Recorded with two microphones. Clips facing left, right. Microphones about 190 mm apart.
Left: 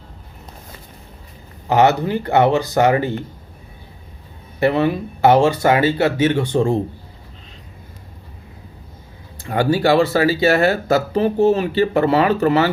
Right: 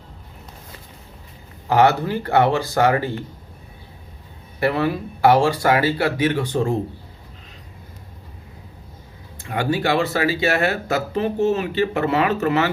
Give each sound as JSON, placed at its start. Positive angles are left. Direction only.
{"t": 1.7, "sound": "speech", "side_deg": 20}
{"t": 4.6, "sound": "speech", "side_deg": 25}
{"t": 9.4, "sound": "speech", "side_deg": 35}